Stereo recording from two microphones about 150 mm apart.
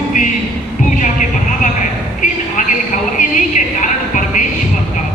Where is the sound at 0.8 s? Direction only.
60° left (ahead or behind).